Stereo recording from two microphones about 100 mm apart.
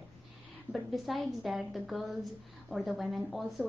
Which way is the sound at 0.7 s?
Centre (ahead or behind).